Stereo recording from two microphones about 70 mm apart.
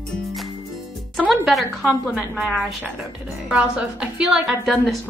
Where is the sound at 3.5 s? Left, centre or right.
Centre.